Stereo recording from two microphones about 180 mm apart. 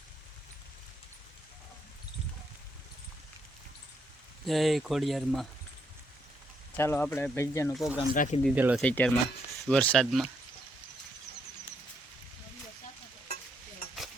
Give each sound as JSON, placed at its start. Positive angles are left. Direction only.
{"t": 4.4, "sound": "speech", "side_deg": 0}
{"t": 6.7, "sound": "speech", "side_deg": 10}
{"t": 7.7, "sound": "speech", "side_deg": 0}
{"t": 8.1, "sound": "speech", "side_deg": 45}
{"t": 8.5, "sound": "speech", "side_deg": -10}
{"t": 8.8, "sound": "speech", "side_deg": 5}